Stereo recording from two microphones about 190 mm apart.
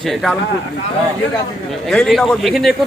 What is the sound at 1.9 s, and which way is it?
Speech, centre (ahead or behind).